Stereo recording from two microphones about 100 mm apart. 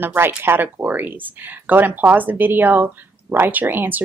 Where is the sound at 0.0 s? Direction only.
20° right (ahead or behind).